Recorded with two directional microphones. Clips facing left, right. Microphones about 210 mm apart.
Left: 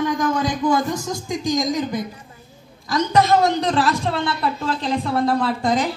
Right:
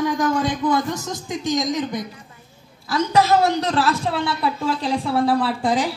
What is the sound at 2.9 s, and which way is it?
A man's voice, 5° right (ahead or behind).